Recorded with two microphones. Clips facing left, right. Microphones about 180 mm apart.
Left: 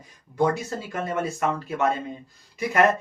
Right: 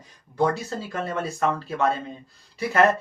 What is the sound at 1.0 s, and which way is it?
Speech, 15° left (ahead or behind).